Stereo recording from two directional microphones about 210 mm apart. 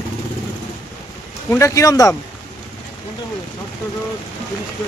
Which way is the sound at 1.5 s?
15° left (ahead or behind).